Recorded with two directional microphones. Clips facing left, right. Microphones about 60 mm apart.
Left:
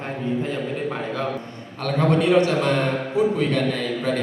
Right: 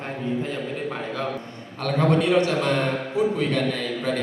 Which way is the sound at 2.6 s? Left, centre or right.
Left.